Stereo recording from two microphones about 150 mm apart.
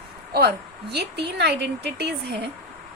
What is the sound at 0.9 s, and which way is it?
A woman's voice, 90° right.